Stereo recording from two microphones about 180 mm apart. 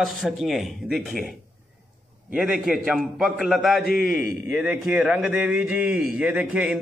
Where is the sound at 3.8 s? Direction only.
55° left (ahead or behind).